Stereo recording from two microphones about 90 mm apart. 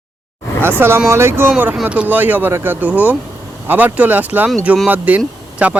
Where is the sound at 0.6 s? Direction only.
25° right (ahead or behind).